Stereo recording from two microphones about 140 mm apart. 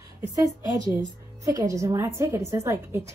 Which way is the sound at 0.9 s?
20° right (ahead or behind).